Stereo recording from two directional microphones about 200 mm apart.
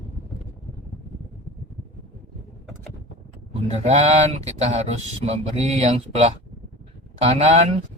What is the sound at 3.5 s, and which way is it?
Speech, 30° right (ahead or behind).